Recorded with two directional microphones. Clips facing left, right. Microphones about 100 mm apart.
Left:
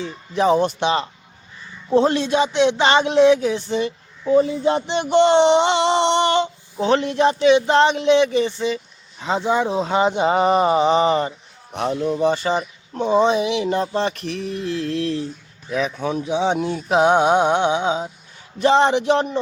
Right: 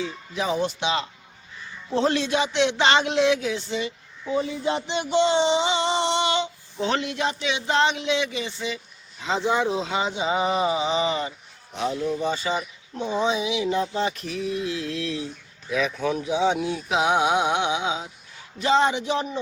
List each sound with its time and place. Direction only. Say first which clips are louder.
0.0 s speech: left 8 dB; 45° left (ahead or behind)
2.0 s speech: left 4 dB; 25° left (ahead or behind)
3.4 s speech: left 6 dB; 40° left (ahead or behind)
6.8 s speech: left 8 dB; 35° left (ahead or behind)
11.7 s speech: left 4 dB; 55° left (ahead or behind)
15.7 s speech: left 2 dB; 35° left (ahead or behind)
16.5 s speech: left 4 dB; 50° left (ahead or behind)
18.6 s speech: left 5 dB; 55° left (ahead or behind); by 19.4 s 70° left (ahead or behind)